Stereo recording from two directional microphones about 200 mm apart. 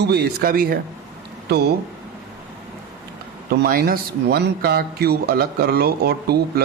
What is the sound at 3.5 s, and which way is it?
Speech, 50° right (ahead or behind).